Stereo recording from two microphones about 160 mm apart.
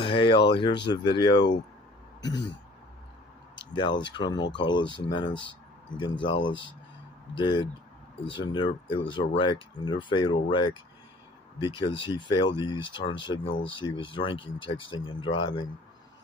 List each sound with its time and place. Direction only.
0.0 s speech: 30° left (ahead or behind)
3.7 s speech: 30° left (ahead or behind)